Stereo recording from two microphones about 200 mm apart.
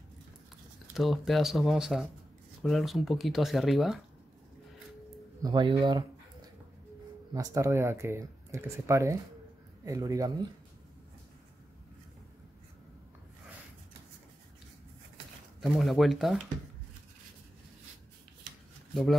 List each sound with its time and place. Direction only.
0.9 s speech: centre (ahead or behind)
5.4 s a sound: 20° right (ahead or behind)
7.3 s speech: 15° right (ahead or behind)
15.6 s speech: centre (ahead or behind)